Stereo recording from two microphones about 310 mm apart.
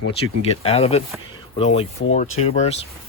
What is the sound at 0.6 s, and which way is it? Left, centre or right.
Speech, centre.